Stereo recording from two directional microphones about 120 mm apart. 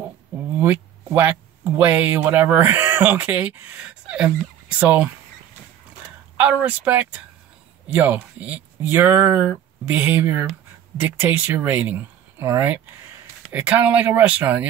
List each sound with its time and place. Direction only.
0.6 s speech: 15° right (ahead or behind)
6.3 s speech: 15° right (ahead or behind)